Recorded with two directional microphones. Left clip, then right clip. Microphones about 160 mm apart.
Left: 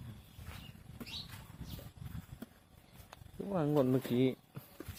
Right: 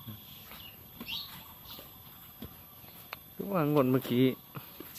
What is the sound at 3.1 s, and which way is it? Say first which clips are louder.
Speech: right 5 dB; centre (ahead or behind).